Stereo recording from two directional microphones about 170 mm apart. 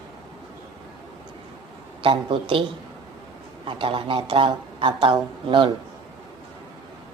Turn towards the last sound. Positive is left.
turn(degrees=-30)  # may be behind; listen again after turning